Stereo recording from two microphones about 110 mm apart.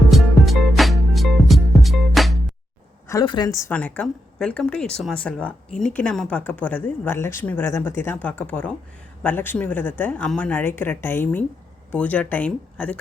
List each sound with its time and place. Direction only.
0.1 s music: centre (ahead or behind)
3.2 s a woman's voice: 40° left (ahead or behind)
3.7 s speech: 15° left (ahead or behind)